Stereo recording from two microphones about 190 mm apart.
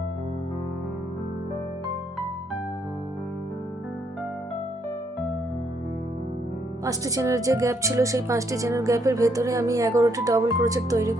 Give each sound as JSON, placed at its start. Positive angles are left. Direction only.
{"t": 6.8, "sound": "speech", "side_deg": -15}